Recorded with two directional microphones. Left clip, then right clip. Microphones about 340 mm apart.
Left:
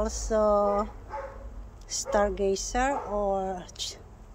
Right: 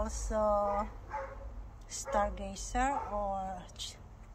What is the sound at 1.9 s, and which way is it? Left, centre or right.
Speech, centre.